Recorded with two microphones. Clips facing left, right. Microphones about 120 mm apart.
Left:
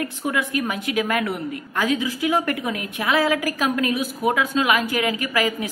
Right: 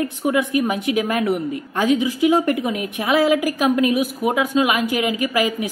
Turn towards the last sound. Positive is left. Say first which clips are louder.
# right 3 dB
turn(degrees=-20)  # may be behind; listen again after turning